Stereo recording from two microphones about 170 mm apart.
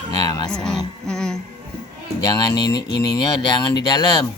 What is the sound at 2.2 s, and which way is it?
Speech, 25° left (ahead or behind).